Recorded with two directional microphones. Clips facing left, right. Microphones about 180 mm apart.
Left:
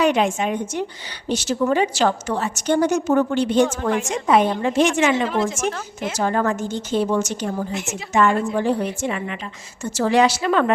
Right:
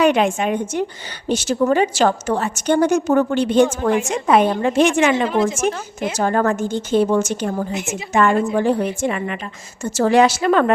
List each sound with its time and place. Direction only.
0.0 s a woman's voice: 60° right (ahead or behind)
5.3 s a woman's voice: 10° right (ahead or behind)
6.1 s a woman's voice: 50° right (ahead or behind)